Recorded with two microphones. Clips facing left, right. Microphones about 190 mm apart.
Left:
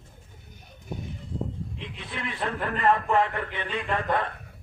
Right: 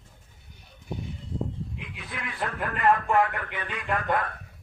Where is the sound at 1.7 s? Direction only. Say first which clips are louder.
Left 2 dB; 30° left (ahead or behind).